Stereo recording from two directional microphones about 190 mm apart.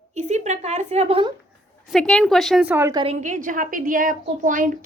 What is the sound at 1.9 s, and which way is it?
A woman's voice, 5° left (ahead or behind).